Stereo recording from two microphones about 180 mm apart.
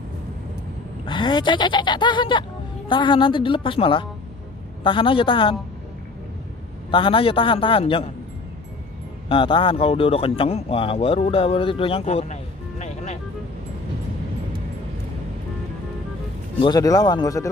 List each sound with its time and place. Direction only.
1.0 s speech: 25° left (ahead or behind)
6.9 s speech: 30° left (ahead or behind)
9.3 s speech: 30° left (ahead or behind)
16.6 s speech: 20° left (ahead or behind)